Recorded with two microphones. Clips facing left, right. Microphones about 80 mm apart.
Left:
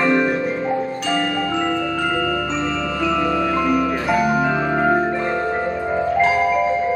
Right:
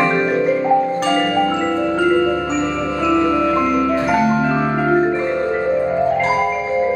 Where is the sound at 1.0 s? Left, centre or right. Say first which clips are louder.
Right 4 dB; right.